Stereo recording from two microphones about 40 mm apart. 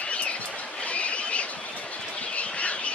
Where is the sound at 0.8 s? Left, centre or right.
Left.